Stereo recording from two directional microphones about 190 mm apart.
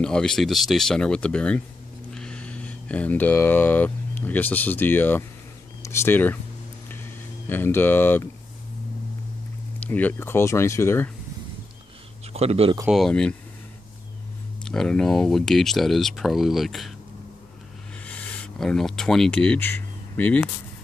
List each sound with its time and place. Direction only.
0.0 s speech: 5° left (ahead or behind)
6.9 s a sound: 10° left (ahead or behind)
9.8 s speech: 10° left (ahead or behind)
12.3 s a man's voice: 30° right (ahead or behind)
12.9 s speech: 5° left (ahead or behind)
14.6 s speech: 5° left (ahead or behind)
18.0 s speech: 10° left (ahead or behind)